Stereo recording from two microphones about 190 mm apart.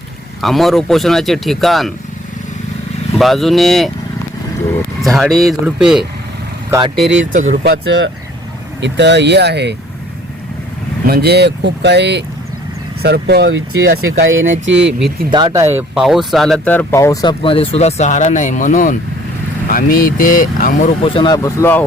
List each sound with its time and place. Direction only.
0.4 s speech: centre (ahead or behind)
3.2 s speech: centre (ahead or behind)
5.0 s speech: centre (ahead or behind)
6.7 s speech: 20° right (ahead or behind)
7.3 s speech: 40° right (ahead or behind)
7.6 s speech: 65° right (ahead or behind)
11.0 s speech: 55° right (ahead or behind)
14.6 s speech: 70° right (ahead or behind)
14.8 s speech: 5° right (ahead or behind)
15.3 s speech: 25° right (ahead or behind); by 21.8 s 10° left (ahead or behind)